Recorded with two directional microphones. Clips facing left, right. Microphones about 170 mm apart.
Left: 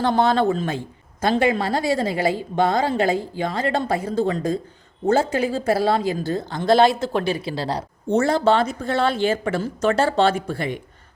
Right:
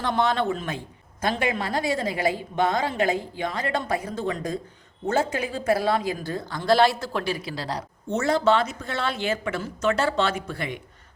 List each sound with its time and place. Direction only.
0.0 s a woman's voice: 35° left (ahead or behind)